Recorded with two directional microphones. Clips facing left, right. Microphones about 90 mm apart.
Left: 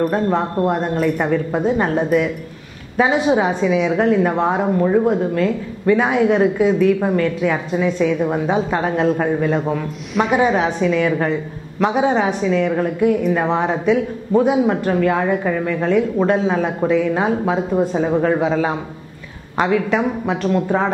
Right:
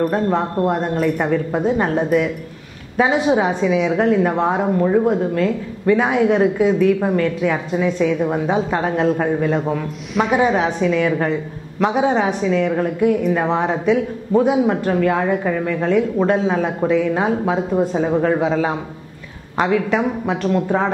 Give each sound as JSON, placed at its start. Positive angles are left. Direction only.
{"t": 0.0, "sound": "a woman's voice", "side_deg": 20}
{"t": 11.1, "sound": "a woman's voice", "side_deg": 15}